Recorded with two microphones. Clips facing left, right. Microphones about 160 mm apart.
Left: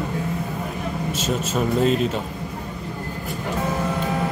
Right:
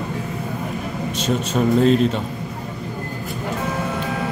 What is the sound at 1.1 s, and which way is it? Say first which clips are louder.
Speech: right 4 dB; 5° left (ahead or behind).